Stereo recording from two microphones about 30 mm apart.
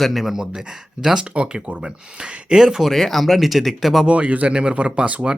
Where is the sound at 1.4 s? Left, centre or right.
Right.